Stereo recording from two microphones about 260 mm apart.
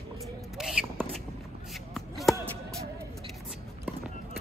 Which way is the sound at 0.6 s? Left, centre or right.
Centre.